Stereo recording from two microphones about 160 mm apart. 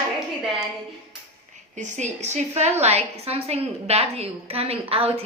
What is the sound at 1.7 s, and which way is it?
A woman's voice, 50° right (ahead or behind).